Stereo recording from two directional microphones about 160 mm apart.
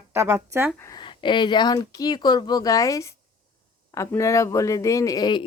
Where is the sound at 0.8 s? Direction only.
25° left (ahead or behind).